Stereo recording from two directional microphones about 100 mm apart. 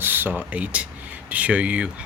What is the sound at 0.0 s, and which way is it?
Speech, 20° right (ahead or behind).